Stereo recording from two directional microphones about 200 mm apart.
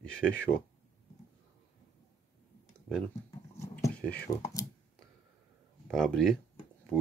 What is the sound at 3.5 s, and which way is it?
Dog, 15° left (ahead or behind).